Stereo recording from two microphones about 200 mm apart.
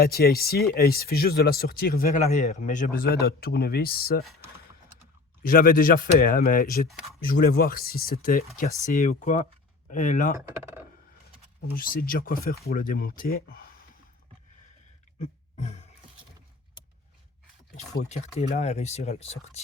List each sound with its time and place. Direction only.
0.0 s speech: 50° left (ahead or behind)
5.4 s speech: 45° left (ahead or behind)
10.3 s speech: 10° right (ahead or behind)
11.8 s speech: 45° left (ahead or behind)
15.2 s a sound: 35° left (ahead or behind)
18.0 s speech: 35° left (ahead or behind)